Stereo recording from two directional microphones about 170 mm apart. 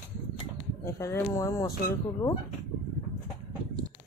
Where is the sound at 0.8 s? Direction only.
15° left (ahead or behind).